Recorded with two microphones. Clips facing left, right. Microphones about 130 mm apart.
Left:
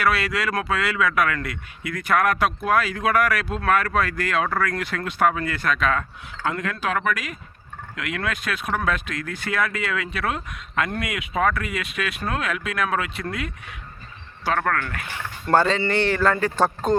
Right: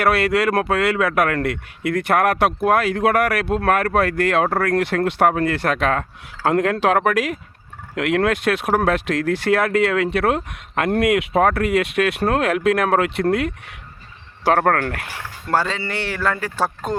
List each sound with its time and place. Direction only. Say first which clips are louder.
0.0 s a man's voice: right 6 dB; 60° right (ahead or behind)
14.5 s speech: right 7 dB; 90° right
14.8 s speech: right 4 dB; 75° right (ahead or behind)
15.4 s speech: left 2 dB; 5° right (ahead or behind)